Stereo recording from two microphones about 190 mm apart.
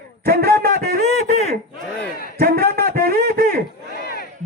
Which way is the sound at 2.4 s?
55° right (ahead or behind).